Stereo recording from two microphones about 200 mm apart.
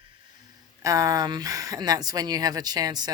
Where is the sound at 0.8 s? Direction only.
15° right (ahead or behind).